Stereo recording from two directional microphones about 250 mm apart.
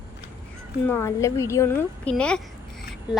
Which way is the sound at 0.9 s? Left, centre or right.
Centre.